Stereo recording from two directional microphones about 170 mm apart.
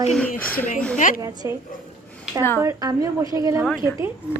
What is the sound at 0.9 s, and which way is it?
Speech, 50° left (ahead or behind).